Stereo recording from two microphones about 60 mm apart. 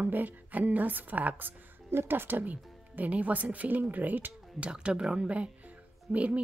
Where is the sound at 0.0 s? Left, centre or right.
Right.